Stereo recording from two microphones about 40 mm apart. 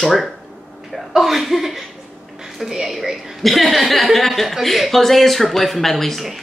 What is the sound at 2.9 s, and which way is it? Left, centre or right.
A woman's voice, centre.